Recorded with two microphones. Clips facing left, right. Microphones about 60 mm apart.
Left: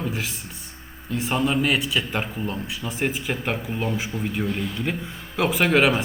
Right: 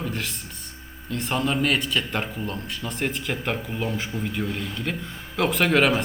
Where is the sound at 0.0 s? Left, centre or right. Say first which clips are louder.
Left 1 dB; centre.